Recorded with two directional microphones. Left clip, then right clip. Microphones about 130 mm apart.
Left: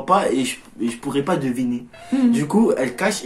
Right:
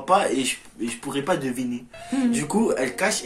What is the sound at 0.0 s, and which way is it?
Speech, 10° left (ahead or behind).